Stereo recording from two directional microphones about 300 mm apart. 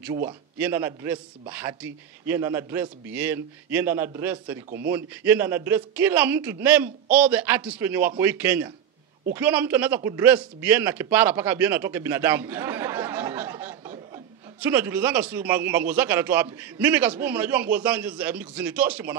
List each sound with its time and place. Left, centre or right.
0.0 s speech: centre
4.6 s speech: right
4.9 s speech: centre